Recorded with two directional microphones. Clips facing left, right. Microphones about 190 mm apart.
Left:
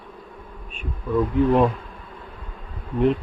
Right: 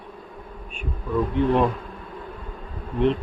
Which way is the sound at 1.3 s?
5° left (ahead or behind).